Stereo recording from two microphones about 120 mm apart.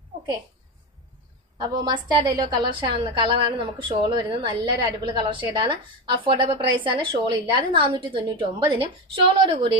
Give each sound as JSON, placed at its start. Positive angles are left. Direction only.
{"t": 1.6, "sound": "a woman's voice", "side_deg": -30}